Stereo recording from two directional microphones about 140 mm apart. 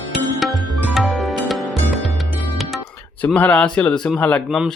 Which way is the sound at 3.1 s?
10° left (ahead or behind).